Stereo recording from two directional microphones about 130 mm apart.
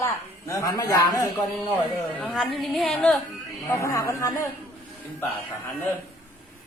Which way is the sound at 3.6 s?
25° left (ahead or behind).